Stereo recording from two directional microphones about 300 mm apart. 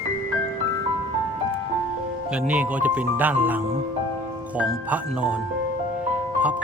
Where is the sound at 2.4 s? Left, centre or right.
Centre.